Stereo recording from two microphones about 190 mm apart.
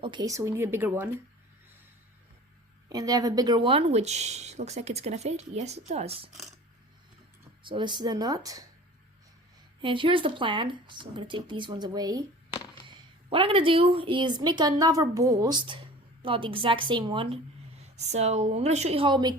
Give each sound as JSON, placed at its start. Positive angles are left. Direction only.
{"t": 0.0, "sound": "speech", "side_deg": -25}
{"t": 2.9, "sound": "speech", "side_deg": -20}
{"t": 7.6, "sound": "speech", "side_deg": -25}
{"t": 9.8, "sound": "speech", "side_deg": -25}
{"t": 13.3, "sound": "speech", "side_deg": -30}